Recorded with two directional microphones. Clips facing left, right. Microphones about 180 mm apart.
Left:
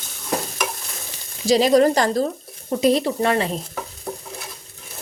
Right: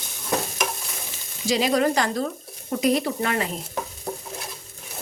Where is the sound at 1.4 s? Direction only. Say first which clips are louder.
Left 6 dB; 35° left (ahead or behind).